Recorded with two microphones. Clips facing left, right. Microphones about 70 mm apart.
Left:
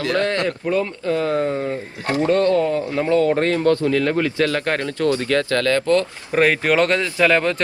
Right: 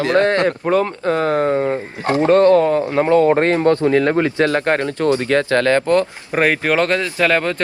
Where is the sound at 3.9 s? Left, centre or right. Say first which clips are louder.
Right 4 dB; right.